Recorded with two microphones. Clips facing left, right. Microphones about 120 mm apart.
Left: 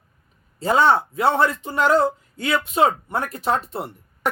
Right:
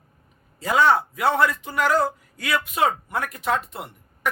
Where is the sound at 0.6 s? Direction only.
30° left (ahead or behind).